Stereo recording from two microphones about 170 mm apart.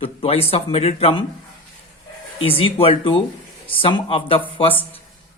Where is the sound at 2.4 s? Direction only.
35° left (ahead or behind).